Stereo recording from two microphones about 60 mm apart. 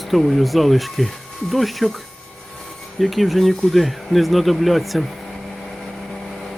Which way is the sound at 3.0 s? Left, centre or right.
Centre.